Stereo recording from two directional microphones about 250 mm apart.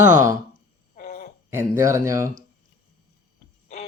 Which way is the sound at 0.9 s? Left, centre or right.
Left.